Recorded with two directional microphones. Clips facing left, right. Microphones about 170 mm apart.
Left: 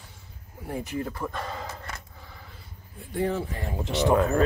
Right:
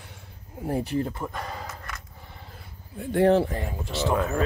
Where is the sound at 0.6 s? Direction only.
35° right (ahead or behind).